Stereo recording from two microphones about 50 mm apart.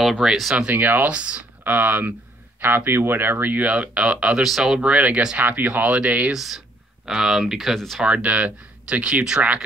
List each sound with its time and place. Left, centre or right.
0.2 s speech: centre
0.7 s speech: right
1.1 s speech: right
1.6 s speech: right
2.6 s speech: right
3.6 s speech: right
4.4 s speech: centre
4.8 s speech: right
5.4 s speech: right
6.3 s speech: centre
8.0 s speech: right